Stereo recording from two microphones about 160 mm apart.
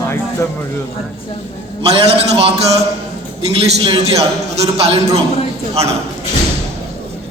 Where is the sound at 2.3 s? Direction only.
40° right (ahead or behind).